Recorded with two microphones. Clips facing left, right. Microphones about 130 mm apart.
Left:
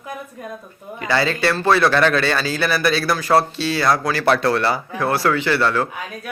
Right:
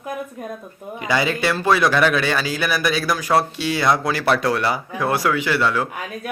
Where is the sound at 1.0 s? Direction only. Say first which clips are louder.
Left 1 dB; 15° right (ahead or behind).